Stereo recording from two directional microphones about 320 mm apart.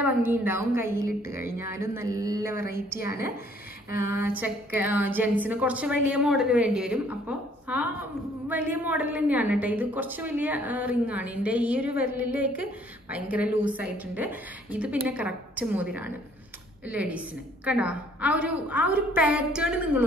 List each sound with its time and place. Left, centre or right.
0.0 s a woman's voice: centre
3.0 s a woman's voice: left
4.0 s a woman's voice: centre